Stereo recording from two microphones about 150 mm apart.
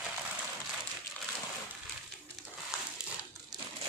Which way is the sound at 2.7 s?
5° right (ahead or behind).